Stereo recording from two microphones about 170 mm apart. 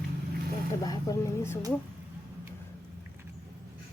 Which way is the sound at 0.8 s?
20° left (ahead or behind).